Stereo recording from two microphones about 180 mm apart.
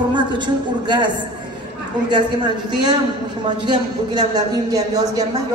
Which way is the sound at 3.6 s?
25° right (ahead or behind).